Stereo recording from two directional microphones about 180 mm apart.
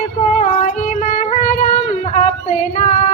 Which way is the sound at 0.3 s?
40° left (ahead or behind).